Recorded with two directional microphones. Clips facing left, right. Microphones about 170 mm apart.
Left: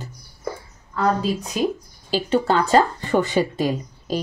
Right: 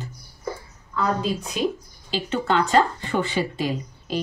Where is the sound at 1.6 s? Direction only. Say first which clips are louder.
Left 2 dB; 40° left (ahead or behind).